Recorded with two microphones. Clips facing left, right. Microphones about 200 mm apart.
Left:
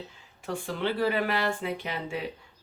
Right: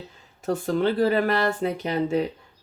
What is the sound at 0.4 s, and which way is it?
Speech, 40° right (ahead or behind).